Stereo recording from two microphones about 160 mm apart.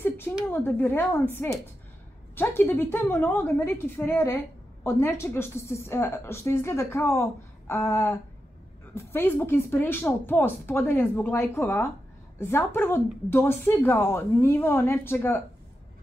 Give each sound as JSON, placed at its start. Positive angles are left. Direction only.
{"t": 0.5, "sound": "a woman's voice", "side_deg": 15}